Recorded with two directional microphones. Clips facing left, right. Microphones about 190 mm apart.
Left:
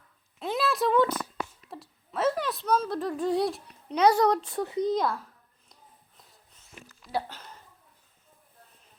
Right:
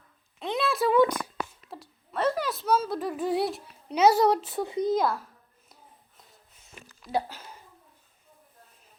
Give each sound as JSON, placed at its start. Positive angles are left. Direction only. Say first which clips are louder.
{"t": 0.3, "sound": "a sound", "louder": "even", "side_deg": 0}
{"t": 1.7, "sound": "a woman's voice", "louder": "right 1 dB", "side_deg": 0}
{"t": 4.6, "sound": "speech", "louder": "even", "side_deg": -15}
{"t": 4.9, "sound": "speech", "louder": "right 4 dB", "side_deg": -5}
{"t": 7.1, "sound": "speech", "louder": "right 3 dB", "side_deg": -10}